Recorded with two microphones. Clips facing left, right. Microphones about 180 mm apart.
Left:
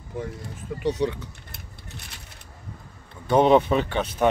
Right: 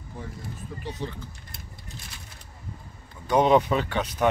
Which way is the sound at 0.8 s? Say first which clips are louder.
Left 11 dB; 75° left (ahead or behind).